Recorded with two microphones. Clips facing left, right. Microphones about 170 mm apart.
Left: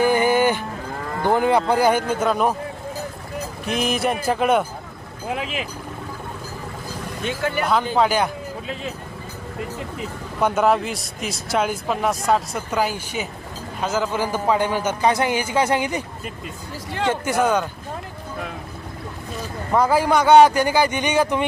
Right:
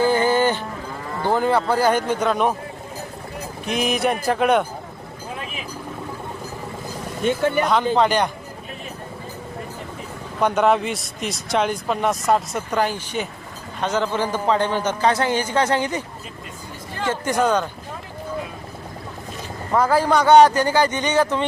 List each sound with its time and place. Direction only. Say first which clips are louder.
0.0 s a sound: even; 15° left (ahead or behind)
1.2 s a man's voice: left 1 dB; 15° left (ahead or behind)
3.7 s speech: right 1 dB; centre (ahead or behind)
5.3 s vehicle: left 7 dB; 90° left
7.6 s speech: left 1 dB; centre (ahead or behind)
10.4 s a man's voice: right 1 dB; 5° left (ahead or behind)
17.1 s a man's voice: even; 10° left (ahead or behind)
19.7 s a man's voice: even; 10° left (ahead or behind)